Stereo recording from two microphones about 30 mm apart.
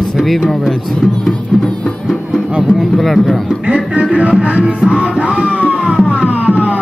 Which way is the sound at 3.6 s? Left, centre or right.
Right.